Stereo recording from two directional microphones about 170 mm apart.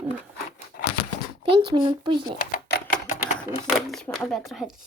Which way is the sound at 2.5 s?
70° left (ahead or behind).